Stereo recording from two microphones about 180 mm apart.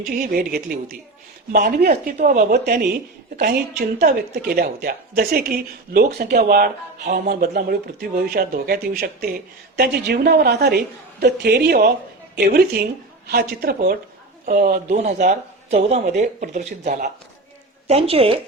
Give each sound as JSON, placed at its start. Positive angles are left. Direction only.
{"t": 0.1, "sound": "a woman's voice", "side_deg": -55}
{"t": 6.3, "sound": "a woman's voice", "side_deg": -55}
{"t": 17.8, "sound": "a woman's voice", "side_deg": -35}